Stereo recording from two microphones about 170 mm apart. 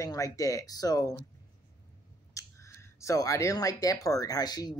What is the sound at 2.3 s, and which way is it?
Speech, 15° left (ahead or behind).